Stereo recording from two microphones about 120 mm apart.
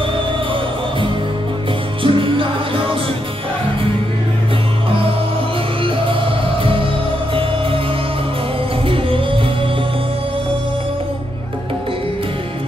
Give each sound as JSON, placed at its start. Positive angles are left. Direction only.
{"t": 2.0, "sound": "music", "side_deg": -45}
{"t": 8.8, "sound": "music", "side_deg": -50}